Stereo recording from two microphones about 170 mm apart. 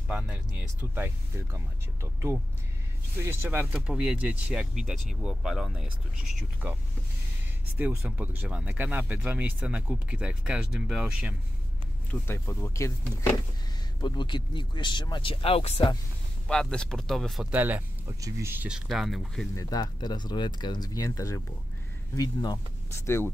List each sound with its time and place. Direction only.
0.1 s speech: 10° right (ahead or behind)
3.3 s speech: 10° right (ahead or behind)
7.7 s speech: 10° right (ahead or behind)
12.1 s speech: 15° left (ahead or behind)
14.0 s speech: 25° left (ahead or behind)
16.4 s speech: 5° left (ahead or behind); by 18.8 s 10° right (ahead or behind)
18.9 s speech: centre (ahead or behind)
19.5 s speech: 20° left (ahead or behind)